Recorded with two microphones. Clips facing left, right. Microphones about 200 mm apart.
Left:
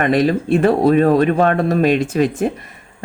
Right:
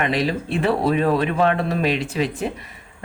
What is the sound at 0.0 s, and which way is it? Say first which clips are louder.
Speech: left 7 dB; 50° left (ahead or behind).